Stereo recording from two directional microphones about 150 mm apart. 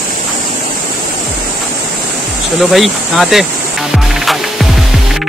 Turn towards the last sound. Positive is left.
turn(degrees=0)  # may be behind; listen again after turning